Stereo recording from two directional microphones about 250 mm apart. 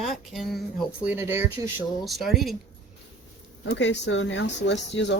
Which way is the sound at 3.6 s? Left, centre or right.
Left.